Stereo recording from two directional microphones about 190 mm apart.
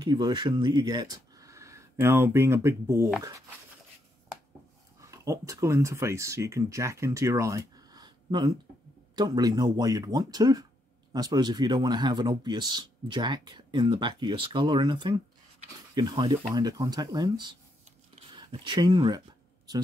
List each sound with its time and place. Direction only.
0.0 s speech: 25° right (ahead or behind)
5.0 s speech: 15° right (ahead or behind)